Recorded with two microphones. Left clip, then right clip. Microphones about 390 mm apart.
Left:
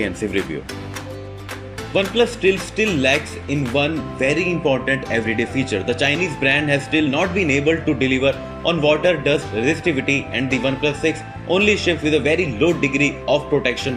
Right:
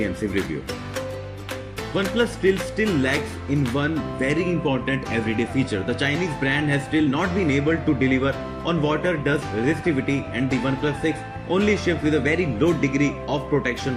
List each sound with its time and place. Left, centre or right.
2.0 s speech: centre